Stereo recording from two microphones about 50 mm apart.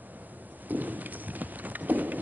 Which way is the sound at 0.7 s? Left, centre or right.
Right.